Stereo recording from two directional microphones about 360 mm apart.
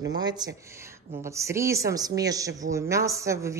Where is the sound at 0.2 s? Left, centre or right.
Centre.